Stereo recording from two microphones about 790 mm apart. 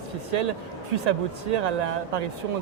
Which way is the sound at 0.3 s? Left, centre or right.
Right.